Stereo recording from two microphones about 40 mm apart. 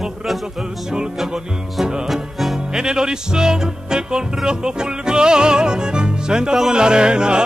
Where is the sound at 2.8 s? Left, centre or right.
Centre.